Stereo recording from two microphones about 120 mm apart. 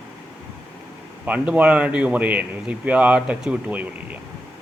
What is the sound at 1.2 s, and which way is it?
Speech, 10° right (ahead or behind).